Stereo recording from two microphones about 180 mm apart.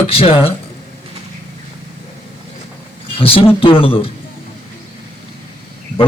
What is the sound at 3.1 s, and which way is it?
Speech, 30° left (ahead or behind).